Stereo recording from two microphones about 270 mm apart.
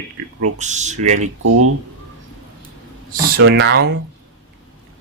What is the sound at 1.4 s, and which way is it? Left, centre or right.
Speech, right.